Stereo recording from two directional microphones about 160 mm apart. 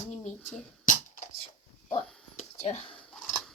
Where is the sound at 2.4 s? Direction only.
40° left (ahead or behind).